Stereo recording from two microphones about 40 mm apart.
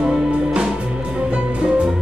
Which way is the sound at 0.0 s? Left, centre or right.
Centre.